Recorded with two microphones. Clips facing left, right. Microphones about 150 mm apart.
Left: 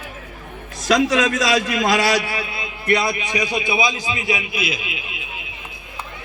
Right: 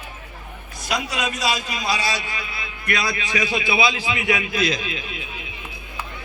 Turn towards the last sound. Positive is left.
turn(degrees=5)  # may be behind; listen again after turning